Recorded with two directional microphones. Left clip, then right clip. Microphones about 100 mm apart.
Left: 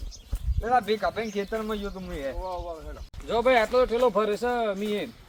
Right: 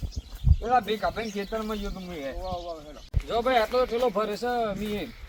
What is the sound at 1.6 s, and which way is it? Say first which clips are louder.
Speech: left 1 dB; 25° left (ahead or behind).